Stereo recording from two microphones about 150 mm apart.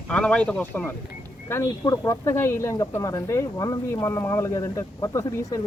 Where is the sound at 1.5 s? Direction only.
20° left (ahead or behind).